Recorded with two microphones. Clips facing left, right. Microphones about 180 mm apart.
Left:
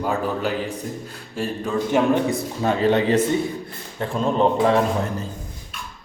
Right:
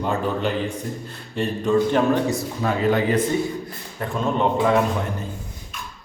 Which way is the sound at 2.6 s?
30° left (ahead or behind).